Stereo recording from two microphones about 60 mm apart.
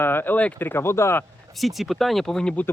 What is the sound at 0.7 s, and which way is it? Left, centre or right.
Speech, left.